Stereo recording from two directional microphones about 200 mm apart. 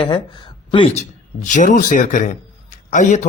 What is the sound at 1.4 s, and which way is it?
Speech, 40° left (ahead or behind).